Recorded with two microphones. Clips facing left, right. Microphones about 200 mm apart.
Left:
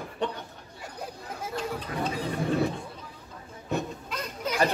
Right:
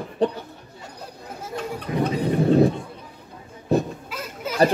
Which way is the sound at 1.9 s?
20° right (ahead or behind).